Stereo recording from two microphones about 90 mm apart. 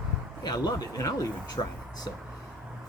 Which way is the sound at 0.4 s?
50° left (ahead or behind).